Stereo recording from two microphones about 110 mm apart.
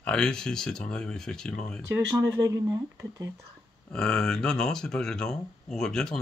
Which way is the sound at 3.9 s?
5° left (ahead or behind).